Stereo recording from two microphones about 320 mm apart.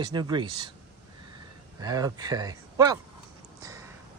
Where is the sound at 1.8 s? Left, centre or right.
Centre.